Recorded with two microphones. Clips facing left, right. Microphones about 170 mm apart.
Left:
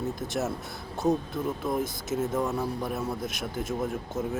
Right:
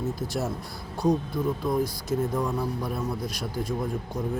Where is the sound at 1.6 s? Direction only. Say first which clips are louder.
Right 3 dB; 5° left (ahead or behind).